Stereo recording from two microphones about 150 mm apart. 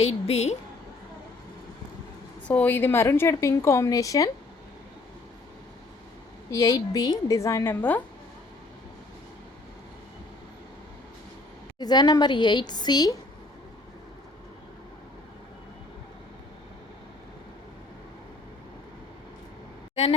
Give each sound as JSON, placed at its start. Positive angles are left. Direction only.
{"t": 0.0, "sound": "a woman's voice", "side_deg": 45}
{"t": 2.5, "sound": "a woman's voice", "side_deg": 10}
{"t": 6.5, "sound": "a woman's voice", "side_deg": 25}
{"t": 11.8, "sound": "a woman's voice", "side_deg": 25}